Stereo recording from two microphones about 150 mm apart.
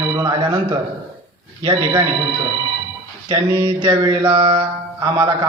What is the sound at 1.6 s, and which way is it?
Speech, 25° right (ahead or behind).